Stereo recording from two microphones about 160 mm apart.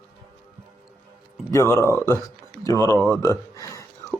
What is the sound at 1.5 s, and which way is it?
Speech, 15° left (ahead or behind).